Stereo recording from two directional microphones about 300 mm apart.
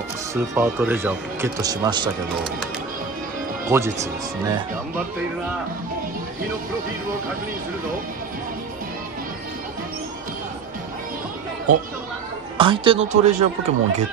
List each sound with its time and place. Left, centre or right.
0.3 s speech: centre
3.6 s speech: centre
12.5 s speech: centre